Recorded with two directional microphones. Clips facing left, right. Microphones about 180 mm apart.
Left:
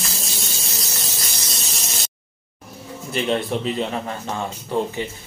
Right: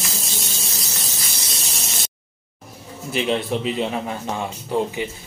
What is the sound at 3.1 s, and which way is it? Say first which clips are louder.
Speech: even; 5° right (ahead or behind).